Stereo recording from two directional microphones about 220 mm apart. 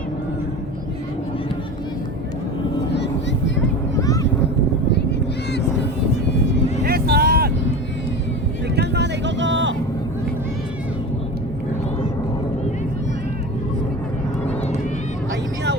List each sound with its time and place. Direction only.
2.9 s vehicle: 50° left (ahead or behind)
3.9 s a sound: 15° left (ahead or behind)
5.5 s vehicle: 50° left (ahead or behind)
6.8 s vehicle: 45° right (ahead or behind)
8.7 s vehicle: 50° right (ahead or behind)